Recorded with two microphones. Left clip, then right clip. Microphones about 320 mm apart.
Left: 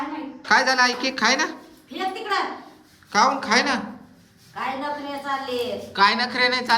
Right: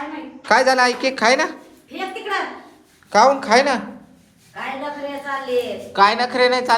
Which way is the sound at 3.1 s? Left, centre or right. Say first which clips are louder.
Right 5 dB; centre.